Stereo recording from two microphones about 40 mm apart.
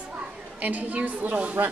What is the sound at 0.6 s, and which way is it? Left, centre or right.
Speech, right.